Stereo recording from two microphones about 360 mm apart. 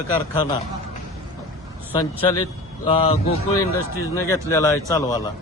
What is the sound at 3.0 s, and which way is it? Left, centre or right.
A man's voice, centre.